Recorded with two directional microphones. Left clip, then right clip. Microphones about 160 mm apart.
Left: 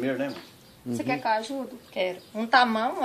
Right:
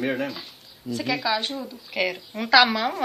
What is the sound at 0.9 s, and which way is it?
Speech, 15° right (ahead or behind).